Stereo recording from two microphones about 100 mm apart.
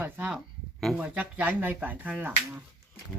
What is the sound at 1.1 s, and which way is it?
Speech, 15° right (ahead or behind).